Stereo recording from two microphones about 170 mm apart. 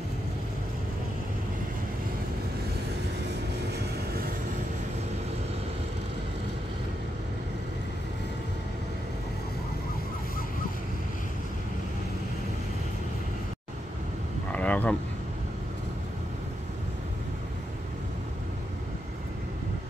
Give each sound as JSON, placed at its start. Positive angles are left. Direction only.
{"t": 3.7, "sound": "vehicle", "side_deg": -65}
{"t": 14.5, "sound": "vehicle", "side_deg": 10}